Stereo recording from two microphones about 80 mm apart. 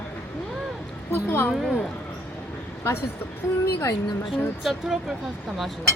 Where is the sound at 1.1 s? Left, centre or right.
Left.